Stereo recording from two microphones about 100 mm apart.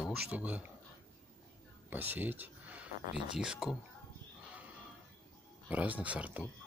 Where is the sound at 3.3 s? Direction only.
5° right (ahead or behind).